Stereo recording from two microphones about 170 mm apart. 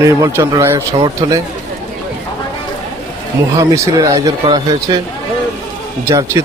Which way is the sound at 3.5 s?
20° right (ahead or behind).